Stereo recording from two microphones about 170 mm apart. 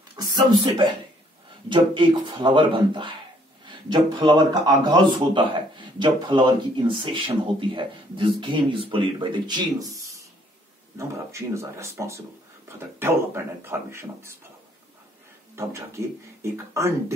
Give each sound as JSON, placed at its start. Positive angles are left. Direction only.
{"t": 0.1, "sound": "a sound", "side_deg": -25}
{"t": 1.7, "sound": "speech", "side_deg": -30}
{"t": 15.6, "sound": "speech", "side_deg": -15}